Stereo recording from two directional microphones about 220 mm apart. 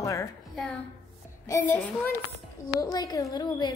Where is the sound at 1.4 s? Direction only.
15° left (ahead or behind).